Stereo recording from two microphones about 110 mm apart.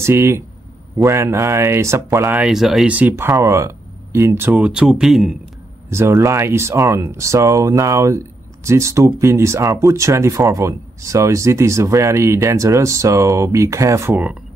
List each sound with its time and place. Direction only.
0.0 s speech: 25° right (ahead or behind)
2.4 s speech: 5° right (ahead or behind)
2.9 s speech: 15° right (ahead or behind)
5.9 s speech: 25° right (ahead or behind)